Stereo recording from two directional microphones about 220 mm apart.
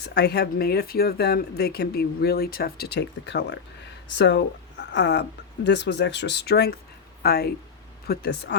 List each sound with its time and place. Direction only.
0.0 s speech: 50° left (ahead or behind)